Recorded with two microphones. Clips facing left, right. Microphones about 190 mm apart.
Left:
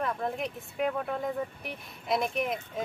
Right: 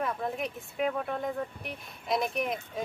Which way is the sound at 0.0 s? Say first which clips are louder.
Left 1 dB; centre (ahead or behind).